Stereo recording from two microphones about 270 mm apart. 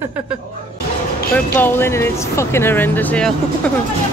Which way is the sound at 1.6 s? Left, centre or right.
Centre.